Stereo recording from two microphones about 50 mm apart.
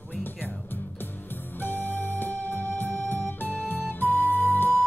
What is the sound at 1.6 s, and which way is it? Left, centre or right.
Music, left.